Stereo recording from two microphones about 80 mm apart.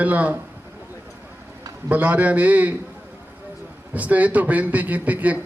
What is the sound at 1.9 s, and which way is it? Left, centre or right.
Speech, right.